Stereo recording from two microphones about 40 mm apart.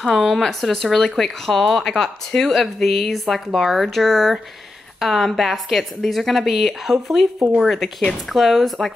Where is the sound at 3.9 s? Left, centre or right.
Centre.